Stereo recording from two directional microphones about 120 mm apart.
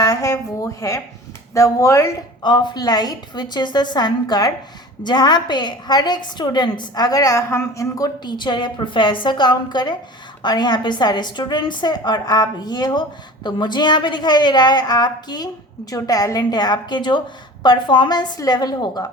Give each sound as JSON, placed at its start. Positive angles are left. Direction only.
{"t": 0.0, "sound": "a sound", "side_deg": 30}
{"t": 1.5, "sound": "speech", "side_deg": 25}
{"t": 2.4, "sound": "a woman's voice", "side_deg": 40}